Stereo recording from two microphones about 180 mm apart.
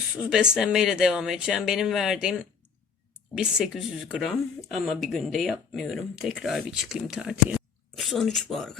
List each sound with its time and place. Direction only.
0.3 s speech: 5° right (ahead or behind)